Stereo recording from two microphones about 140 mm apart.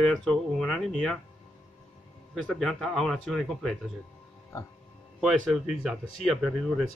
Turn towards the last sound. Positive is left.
turn(degrees=0)  # may be behind; listen again after turning